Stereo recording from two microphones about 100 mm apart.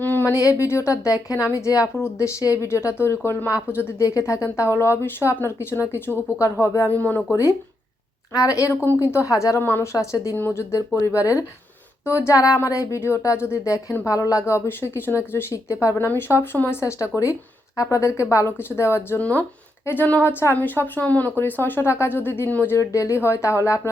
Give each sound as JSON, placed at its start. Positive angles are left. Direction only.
{"t": 0.0, "sound": "a sound", "side_deg": 20}
{"t": 0.4, "sound": "a woman's voice", "side_deg": 30}
{"t": 6.9, "sound": "speech", "side_deg": 15}
{"t": 8.3, "sound": "a woman's voice", "side_deg": 35}
{"t": 10.3, "sound": "a woman's voice", "side_deg": 20}